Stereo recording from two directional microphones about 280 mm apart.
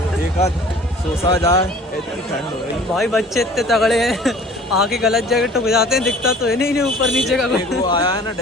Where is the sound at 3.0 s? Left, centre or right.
Centre.